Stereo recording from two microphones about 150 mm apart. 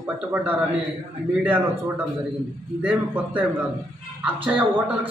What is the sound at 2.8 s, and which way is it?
Speech, 10° right (ahead or behind).